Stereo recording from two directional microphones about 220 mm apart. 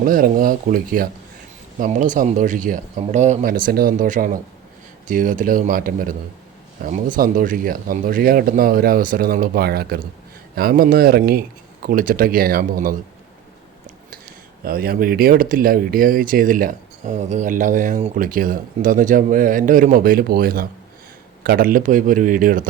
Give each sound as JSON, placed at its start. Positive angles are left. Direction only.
{"t": 0.0, "sound": "speech", "side_deg": -40}
{"t": 14.6, "sound": "speech", "side_deg": -40}